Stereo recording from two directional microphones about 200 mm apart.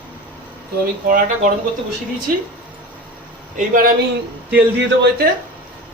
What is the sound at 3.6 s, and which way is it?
Speech, 45° right (ahead or behind).